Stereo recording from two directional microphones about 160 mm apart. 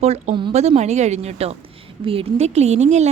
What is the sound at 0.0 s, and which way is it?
A woman's voice, 40° right (ahead or behind).